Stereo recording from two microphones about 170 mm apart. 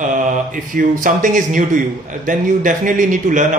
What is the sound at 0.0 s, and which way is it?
Speech, 50° right (ahead or behind).